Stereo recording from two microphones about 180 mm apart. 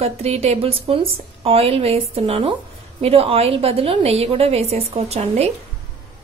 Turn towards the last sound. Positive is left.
turn(degrees=-35)  # may be behind; listen again after turning